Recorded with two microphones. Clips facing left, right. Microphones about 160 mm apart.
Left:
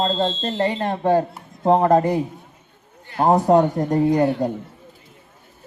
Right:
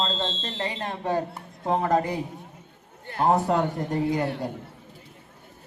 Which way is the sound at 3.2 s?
35° left (ahead or behind).